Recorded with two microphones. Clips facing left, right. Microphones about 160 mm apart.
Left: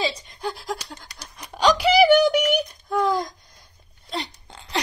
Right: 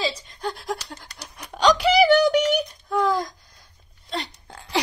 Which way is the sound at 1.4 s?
5° left (ahead or behind).